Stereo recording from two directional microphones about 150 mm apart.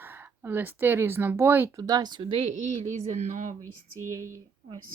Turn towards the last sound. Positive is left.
turn(degrees=-20)  # may be behind; listen again after turning